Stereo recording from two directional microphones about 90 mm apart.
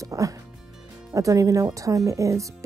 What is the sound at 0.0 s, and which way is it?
Music, 35° right (ahead or behind).